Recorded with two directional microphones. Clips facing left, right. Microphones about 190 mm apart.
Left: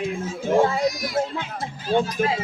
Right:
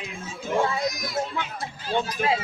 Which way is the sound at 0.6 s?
35° left (ahead or behind).